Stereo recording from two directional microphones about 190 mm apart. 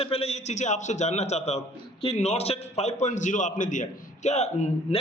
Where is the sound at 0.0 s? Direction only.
30° left (ahead or behind).